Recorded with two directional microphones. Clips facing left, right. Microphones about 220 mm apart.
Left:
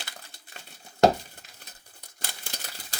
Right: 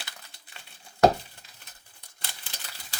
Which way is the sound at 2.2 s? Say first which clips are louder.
Left 4 dB; 45° left (ahead or behind).